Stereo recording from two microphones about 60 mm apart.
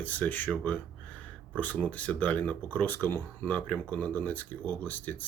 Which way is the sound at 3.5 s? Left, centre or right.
Left.